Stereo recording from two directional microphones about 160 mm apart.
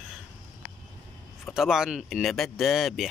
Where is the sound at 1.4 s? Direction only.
Centre (ahead or behind).